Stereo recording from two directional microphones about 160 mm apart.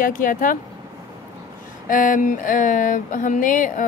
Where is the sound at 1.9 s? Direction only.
55° left (ahead or behind).